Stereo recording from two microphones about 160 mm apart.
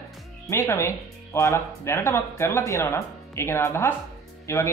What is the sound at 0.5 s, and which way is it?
Speech, 15° left (ahead or behind).